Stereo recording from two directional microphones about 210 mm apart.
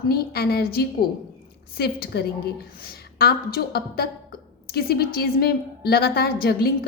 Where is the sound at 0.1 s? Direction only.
50° left (ahead or behind).